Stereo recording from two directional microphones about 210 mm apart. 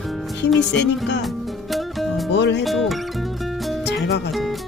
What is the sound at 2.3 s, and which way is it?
Speech, 55° left (ahead or behind).